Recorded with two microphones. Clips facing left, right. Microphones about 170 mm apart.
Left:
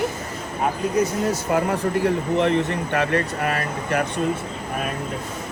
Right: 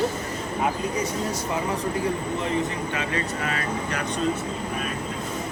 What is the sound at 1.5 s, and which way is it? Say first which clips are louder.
Speech: left 6 dB; 65° left (ahead or behind).